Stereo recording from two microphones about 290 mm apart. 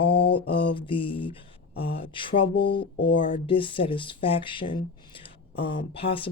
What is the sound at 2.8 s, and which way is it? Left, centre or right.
Speech, left.